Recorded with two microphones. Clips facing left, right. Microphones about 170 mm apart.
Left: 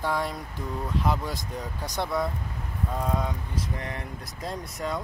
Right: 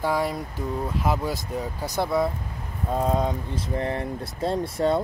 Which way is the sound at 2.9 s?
25° right (ahead or behind).